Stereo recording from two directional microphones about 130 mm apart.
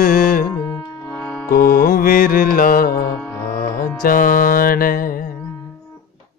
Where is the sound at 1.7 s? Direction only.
90° left.